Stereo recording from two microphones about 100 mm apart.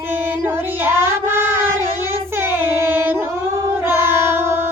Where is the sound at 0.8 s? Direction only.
25° right (ahead or behind).